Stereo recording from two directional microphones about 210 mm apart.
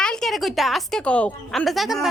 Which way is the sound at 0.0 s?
5° left (ahead or behind).